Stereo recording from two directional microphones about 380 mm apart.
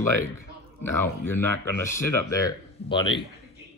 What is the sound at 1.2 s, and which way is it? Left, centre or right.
Speech, centre.